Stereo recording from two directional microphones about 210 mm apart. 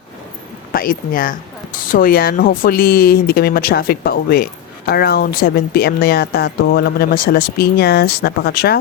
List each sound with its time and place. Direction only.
0.7 s speech: 45° left (ahead or behind)